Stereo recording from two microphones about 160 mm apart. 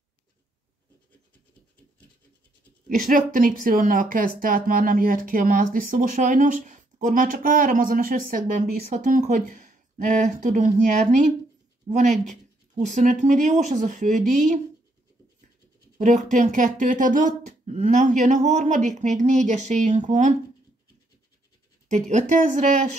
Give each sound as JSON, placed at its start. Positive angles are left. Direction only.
{"t": 3.1, "sound": "speech", "side_deg": -60}
{"t": 16.0, "sound": "speech", "side_deg": -50}
{"t": 21.8, "sound": "speech", "side_deg": -50}